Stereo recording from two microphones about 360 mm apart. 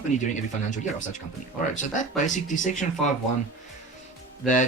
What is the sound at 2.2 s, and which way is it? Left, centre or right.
Speech, left.